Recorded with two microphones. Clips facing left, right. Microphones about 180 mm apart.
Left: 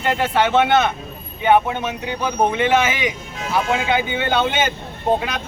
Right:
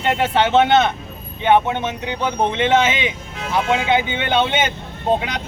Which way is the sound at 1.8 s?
20° right (ahead or behind).